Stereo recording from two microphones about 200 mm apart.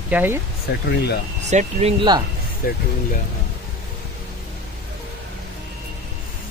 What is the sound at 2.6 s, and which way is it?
Speech, 45° left (ahead or behind).